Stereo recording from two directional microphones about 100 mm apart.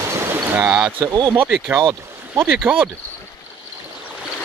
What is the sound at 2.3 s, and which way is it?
Speech, 20° right (ahead or behind).